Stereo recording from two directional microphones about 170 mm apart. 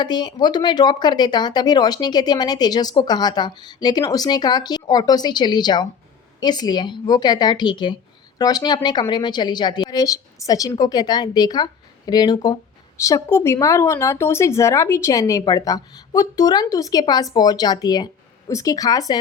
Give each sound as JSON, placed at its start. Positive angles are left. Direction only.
{"t": 0.0, "sound": "speech", "side_deg": 25}